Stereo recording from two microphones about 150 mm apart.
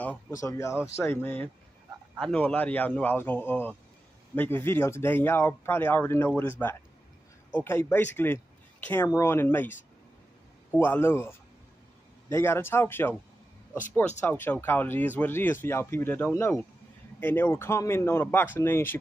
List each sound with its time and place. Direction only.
0.4 s speech: 20° left (ahead or behind)
7.5 s speech: 15° left (ahead or behind)
10.7 s speech: 15° left (ahead or behind)
14.2 s speech: 15° left (ahead or behind)